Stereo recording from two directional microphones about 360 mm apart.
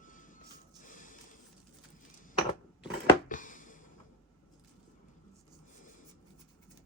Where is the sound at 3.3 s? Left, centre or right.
Left.